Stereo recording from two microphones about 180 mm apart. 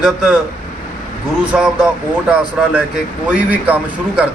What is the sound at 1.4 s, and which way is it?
Speech, 5° right (ahead or behind).